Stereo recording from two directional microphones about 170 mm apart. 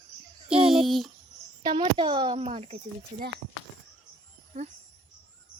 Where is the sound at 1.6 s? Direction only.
30° right (ahead or behind).